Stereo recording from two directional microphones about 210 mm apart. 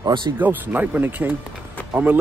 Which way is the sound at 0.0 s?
20° right (ahead or behind).